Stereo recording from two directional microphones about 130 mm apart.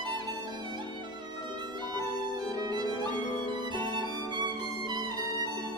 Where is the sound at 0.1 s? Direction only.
35° right (ahead or behind).